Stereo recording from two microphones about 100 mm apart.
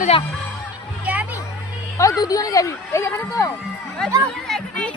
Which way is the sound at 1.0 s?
15° right (ahead or behind).